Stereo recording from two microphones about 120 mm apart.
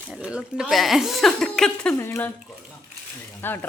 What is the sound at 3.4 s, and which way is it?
Speech, 15° left (ahead or behind).